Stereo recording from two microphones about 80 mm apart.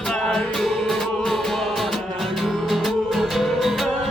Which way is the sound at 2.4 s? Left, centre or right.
Centre.